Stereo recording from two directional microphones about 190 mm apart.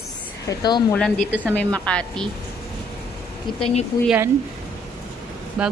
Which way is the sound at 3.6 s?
35° left (ahead or behind).